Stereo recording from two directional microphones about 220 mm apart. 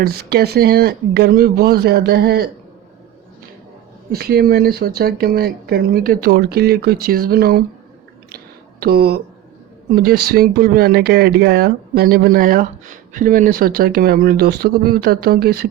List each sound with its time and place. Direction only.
0.0 s speech: 45° right (ahead or behind)
4.1 s speech: 45° right (ahead or behind)
8.8 s speech: 45° right (ahead or behind)